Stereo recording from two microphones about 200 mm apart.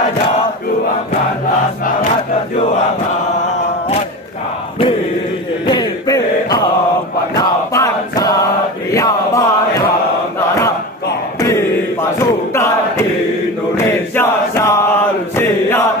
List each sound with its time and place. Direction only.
5.7 s chant: 20° left (ahead or behind)
11.3 s chant: 15° left (ahead or behind)